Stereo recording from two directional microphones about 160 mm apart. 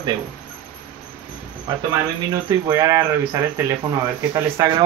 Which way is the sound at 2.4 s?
20° right (ahead or behind).